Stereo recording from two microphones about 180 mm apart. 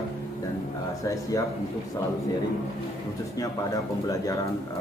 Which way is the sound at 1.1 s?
20° left (ahead or behind).